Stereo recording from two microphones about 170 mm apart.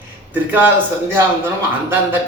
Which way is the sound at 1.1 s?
15° right (ahead or behind).